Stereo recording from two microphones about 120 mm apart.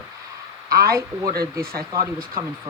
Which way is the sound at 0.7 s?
30° right (ahead or behind).